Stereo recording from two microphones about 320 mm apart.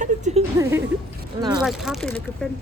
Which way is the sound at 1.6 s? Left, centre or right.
Centre.